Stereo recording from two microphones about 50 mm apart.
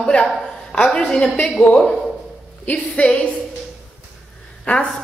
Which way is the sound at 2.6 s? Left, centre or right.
Left.